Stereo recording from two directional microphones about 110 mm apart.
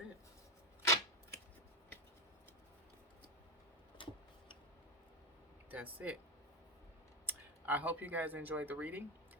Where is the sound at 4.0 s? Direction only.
50° left (ahead or behind).